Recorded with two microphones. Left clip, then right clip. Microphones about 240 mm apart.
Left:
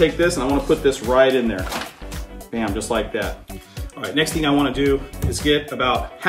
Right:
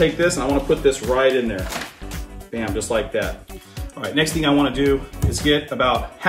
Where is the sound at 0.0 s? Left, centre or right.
Centre.